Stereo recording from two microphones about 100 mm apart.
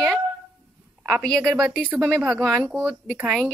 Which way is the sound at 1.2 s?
10° left (ahead or behind).